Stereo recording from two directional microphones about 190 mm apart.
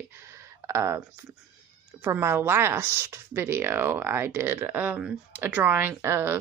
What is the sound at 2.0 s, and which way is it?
Speech, 10° right (ahead or behind).